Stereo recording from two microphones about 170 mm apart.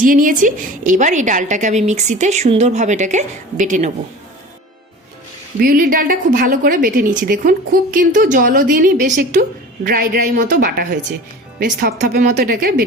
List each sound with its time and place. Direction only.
0.0 s a woman's voice: 55° right (ahead or behind)
5.5 s a woman's voice: 60° right (ahead or behind)